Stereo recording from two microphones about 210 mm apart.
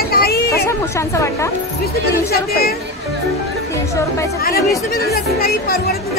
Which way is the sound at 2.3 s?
45° left (ahead or behind).